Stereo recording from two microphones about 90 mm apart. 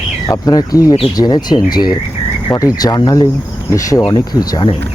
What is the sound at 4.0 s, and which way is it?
Speech, 50° left (ahead or behind).